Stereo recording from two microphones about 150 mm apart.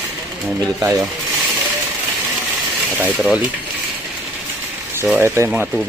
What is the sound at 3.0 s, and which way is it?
Speech, 10° right (ahead or behind).